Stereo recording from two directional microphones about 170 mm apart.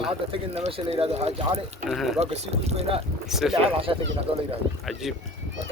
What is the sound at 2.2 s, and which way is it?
Speech, 40° right (ahead or behind).